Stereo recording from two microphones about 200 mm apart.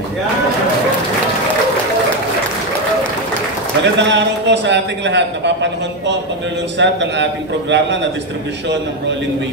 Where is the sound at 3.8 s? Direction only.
60° right (ahead or behind).